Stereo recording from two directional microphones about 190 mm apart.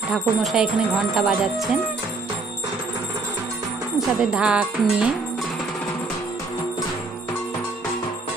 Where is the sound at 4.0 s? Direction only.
5° right (ahead or behind).